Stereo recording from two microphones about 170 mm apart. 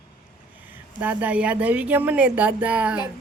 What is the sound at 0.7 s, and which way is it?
A woman's voice, 10° right (ahead or behind).